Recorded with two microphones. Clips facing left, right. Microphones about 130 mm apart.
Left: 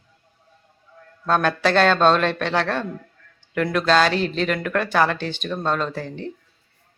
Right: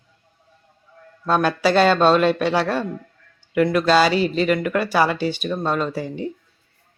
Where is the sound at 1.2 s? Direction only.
5° right (ahead or behind).